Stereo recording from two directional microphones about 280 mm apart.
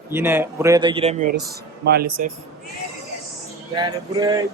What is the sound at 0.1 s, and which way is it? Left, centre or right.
Speech, centre.